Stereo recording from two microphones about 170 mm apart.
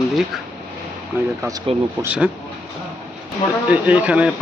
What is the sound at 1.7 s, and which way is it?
Speech, 35° right (ahead or behind).